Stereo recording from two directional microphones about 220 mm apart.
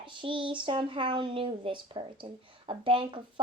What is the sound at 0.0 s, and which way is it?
Speech, 20° right (ahead or behind).